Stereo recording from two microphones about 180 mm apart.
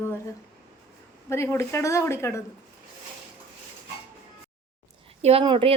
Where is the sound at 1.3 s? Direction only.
15° left (ahead or behind).